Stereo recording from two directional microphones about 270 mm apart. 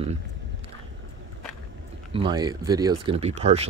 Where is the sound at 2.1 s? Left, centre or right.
Centre.